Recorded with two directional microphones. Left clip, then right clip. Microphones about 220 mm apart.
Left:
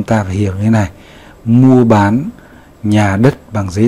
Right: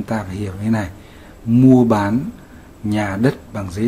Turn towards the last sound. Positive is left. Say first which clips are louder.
# left 9 dB
turn(degrees=25)  # may be behind; listen again after turning